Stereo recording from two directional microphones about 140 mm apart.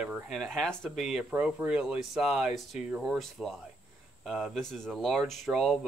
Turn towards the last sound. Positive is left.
turn(degrees=-5)  # may be behind; listen again after turning